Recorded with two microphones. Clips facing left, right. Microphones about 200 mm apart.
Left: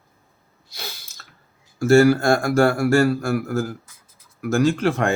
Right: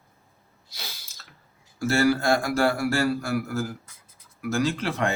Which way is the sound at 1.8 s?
45° left (ahead or behind).